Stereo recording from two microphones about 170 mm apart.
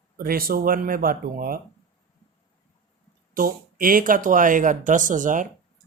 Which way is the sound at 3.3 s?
55° right (ahead or behind).